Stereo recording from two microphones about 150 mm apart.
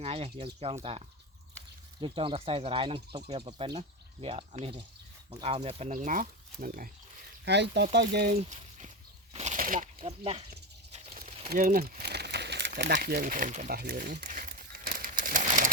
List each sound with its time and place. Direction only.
0.0 s speech: 40° right (ahead or behind)
5.9 s speech: 65° right (ahead or behind)
8.1 s speech: 90° right
8.4 s speech: 50° right (ahead or behind)
9.3 s a sound: 50° right (ahead or behind)
10.0 s speech: 45° right (ahead or behind)
10.9 s a sound: 50° right (ahead or behind)
11.6 s crumpling: 70° right (ahead or behind)